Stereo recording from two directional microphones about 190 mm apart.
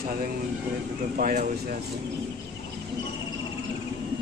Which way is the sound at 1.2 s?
45° right (ahead or behind).